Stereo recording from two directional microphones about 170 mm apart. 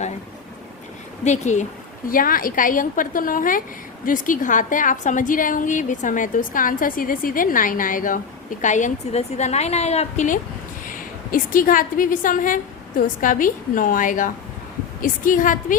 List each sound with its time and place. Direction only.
1.2 s a woman's voice: 45° left (ahead or behind)
2.0 s a woman's voice: 55° left (ahead or behind)